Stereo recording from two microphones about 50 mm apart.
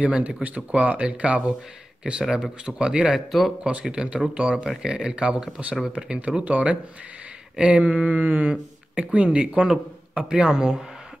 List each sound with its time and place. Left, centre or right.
0.0 s speech: right
3.3 s speech: centre
3.8 s speech: centre